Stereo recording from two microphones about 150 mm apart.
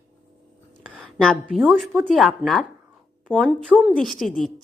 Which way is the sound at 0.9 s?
5° left (ahead or behind).